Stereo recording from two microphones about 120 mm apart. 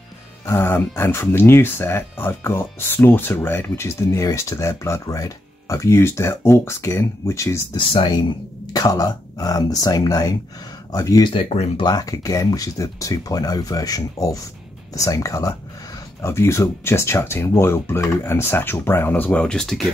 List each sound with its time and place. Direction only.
0.5 s speech: 20° left (ahead or behind)
7.7 s speech: 40° left (ahead or behind)
8.7 s speech: 30° left (ahead or behind)
11.2 s speech: 55° left (ahead or behind)
11.8 s speech: 30° left (ahead or behind); by 19.8 s 5° left (ahead or behind)